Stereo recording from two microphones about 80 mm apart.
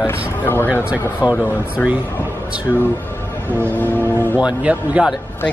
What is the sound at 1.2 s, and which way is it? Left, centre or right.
Speech, centre.